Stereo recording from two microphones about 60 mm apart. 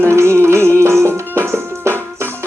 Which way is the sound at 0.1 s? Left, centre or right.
Right.